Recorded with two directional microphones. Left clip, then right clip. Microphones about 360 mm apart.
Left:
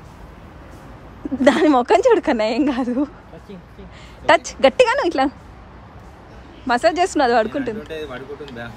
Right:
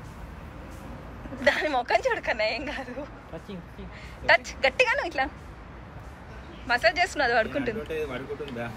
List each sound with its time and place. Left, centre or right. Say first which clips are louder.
1.4 s speech: left 9 dB; centre
4.3 s speech: left 8 dB; centre
6.7 s speech: left 6 dB; centre